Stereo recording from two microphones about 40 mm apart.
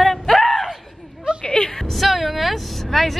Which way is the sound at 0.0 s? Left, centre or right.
Centre.